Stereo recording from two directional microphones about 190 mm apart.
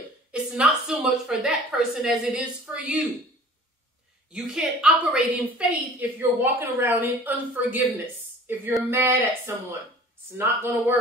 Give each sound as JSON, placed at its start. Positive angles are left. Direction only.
{"t": 0.3, "sound": "a woman's voice", "side_deg": -5}
{"t": 4.3, "sound": "a woman's voice", "side_deg": -5}
{"t": 8.9, "sound": "a woman's voice", "side_deg": -15}